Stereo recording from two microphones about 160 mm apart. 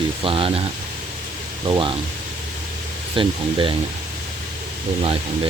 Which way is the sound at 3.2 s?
35° right (ahead or behind).